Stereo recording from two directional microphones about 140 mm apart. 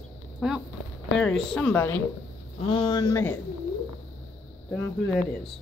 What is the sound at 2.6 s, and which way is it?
Speech, 40° left (ahead or behind).